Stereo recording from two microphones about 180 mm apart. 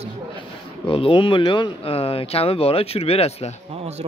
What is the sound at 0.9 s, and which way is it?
Speech, 30° left (ahead or behind).